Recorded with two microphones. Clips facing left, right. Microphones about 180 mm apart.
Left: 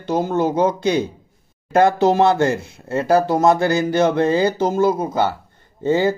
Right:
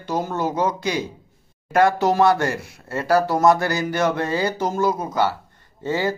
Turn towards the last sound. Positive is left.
turn(degrees=25)  # may be behind; listen again after turning